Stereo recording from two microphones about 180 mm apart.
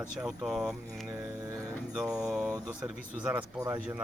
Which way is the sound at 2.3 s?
5° right (ahead or behind).